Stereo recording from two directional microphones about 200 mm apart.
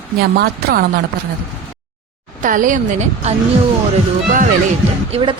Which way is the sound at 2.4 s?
40° right (ahead or behind).